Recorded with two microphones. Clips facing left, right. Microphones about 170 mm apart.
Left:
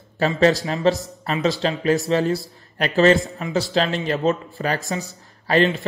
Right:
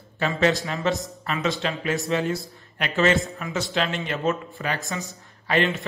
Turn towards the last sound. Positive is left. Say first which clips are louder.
# left 5 dB
turn(degrees=35)  # may be behind; listen again after turning